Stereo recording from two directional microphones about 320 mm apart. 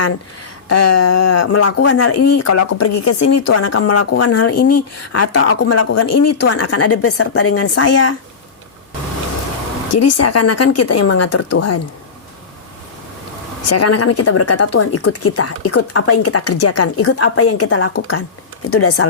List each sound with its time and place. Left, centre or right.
0.7 s speech: left
9.9 s speech: left
13.7 s speech: left